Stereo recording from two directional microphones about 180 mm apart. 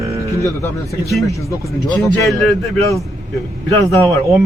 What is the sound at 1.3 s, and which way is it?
Speech, 15° left (ahead or behind).